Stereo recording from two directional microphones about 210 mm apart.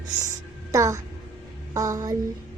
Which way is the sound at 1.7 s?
15° right (ahead or behind).